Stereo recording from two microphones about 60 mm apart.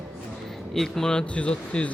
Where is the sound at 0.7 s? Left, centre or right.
Centre.